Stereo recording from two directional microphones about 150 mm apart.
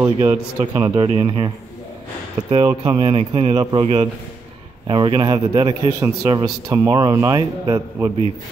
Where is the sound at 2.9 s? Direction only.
40° right (ahead or behind); by 8.1 s 25° right (ahead or behind).